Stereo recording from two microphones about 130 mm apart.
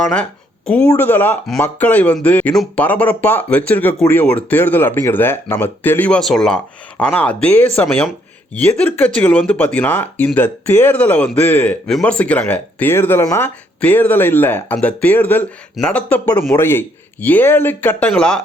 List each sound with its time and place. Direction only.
0.0 s speech: 5° left (ahead or behind)